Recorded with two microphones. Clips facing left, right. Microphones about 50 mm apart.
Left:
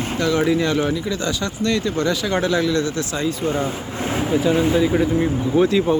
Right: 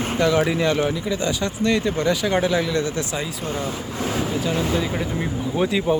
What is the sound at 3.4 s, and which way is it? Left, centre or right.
Speech, centre.